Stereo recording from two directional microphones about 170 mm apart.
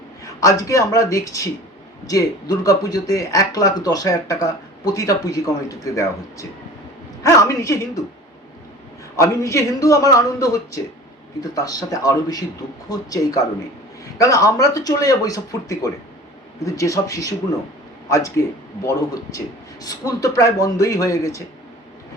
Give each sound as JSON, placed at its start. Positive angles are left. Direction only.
{"t": 0.3, "sound": "speech", "side_deg": 20}
{"t": 9.1, "sound": "speech", "side_deg": 15}
{"t": 18.4, "sound": "speech", "side_deg": 20}
{"t": 19.8, "sound": "speech", "side_deg": 20}